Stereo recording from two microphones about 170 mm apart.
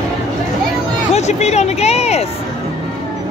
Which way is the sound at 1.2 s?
40° left (ahead or behind).